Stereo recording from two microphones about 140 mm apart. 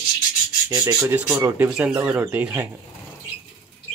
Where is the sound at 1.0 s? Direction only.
20° right (ahead or behind).